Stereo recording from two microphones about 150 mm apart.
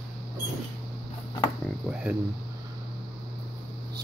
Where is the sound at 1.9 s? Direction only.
10° right (ahead or behind).